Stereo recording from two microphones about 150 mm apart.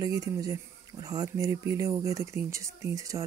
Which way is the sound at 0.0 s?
25° right (ahead or behind).